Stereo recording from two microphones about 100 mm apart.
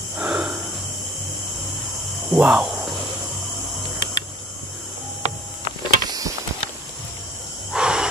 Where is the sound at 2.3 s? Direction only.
10° right (ahead or behind).